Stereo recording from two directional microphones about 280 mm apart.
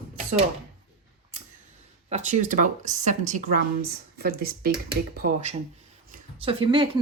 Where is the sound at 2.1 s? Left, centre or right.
Right.